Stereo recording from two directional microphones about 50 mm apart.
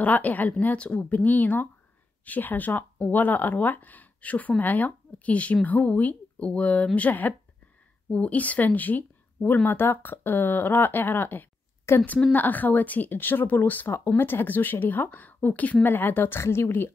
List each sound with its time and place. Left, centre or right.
0.0 s speech: left
9.7 s speech: left
11.9 s speech: left
12.4 s speech: left
13.9 s speech: left
15.8 s speech: left
16.3 s speech: left